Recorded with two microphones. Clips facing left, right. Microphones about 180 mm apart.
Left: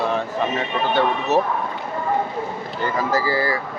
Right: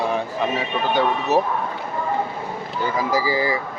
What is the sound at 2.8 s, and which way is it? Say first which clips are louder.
Speech: even; 10° right (ahead or behind).